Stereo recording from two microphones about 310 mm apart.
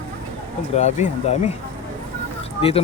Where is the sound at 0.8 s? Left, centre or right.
Left.